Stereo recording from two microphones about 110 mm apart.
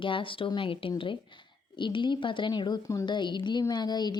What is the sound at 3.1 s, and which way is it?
Speech, 45° left (ahead or behind).